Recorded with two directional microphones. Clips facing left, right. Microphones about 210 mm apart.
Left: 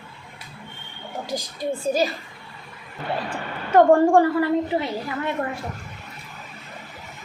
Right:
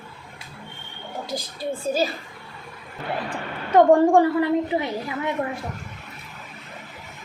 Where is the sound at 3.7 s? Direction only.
15° right (ahead or behind).